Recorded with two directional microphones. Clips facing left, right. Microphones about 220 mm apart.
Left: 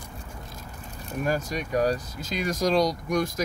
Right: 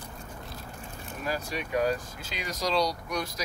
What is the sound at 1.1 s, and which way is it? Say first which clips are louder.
Speech: left 6 dB; 45° left (ahead or behind).